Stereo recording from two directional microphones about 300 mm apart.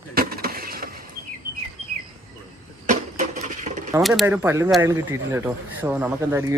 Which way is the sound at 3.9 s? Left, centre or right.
Centre.